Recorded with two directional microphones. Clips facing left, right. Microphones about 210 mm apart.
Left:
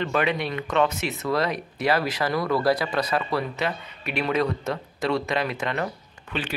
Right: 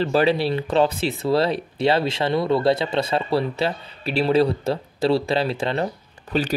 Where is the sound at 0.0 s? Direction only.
30° right (ahead or behind).